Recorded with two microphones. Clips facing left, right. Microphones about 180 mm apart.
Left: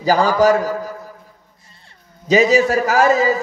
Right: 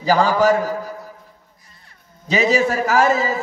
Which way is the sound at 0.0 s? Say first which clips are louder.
Left 2 dB; 40° left (ahead or behind).